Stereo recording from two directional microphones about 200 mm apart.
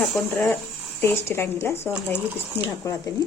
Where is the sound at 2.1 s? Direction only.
10° right (ahead or behind).